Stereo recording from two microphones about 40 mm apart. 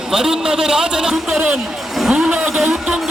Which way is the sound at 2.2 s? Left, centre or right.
Right.